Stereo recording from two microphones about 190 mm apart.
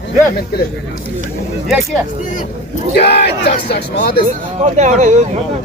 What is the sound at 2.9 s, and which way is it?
Speech, 60° left (ahead or behind).